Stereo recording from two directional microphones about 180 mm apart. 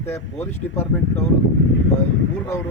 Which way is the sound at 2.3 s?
15° left (ahead or behind).